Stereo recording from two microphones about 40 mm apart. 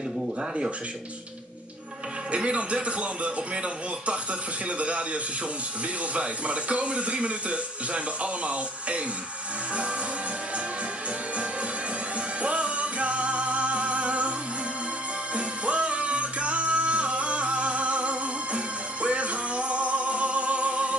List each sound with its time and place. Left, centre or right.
2.3 s a man's voice: right
12.4 s music: right
15.3 s music: right